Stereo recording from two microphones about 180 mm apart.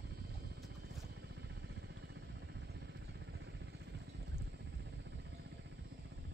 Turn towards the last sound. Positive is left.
turn(degrees=-70)  # may be behind; listen again after turning